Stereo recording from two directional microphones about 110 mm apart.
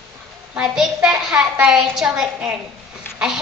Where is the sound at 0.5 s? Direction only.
5° right (ahead or behind).